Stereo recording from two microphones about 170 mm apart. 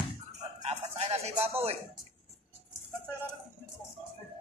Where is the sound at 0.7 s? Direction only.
40° right (ahead or behind).